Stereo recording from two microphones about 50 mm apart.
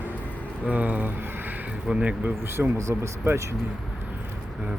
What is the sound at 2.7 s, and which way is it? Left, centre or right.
Speech, right.